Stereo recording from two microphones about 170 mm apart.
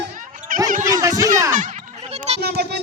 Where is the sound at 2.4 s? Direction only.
70° right (ahead or behind).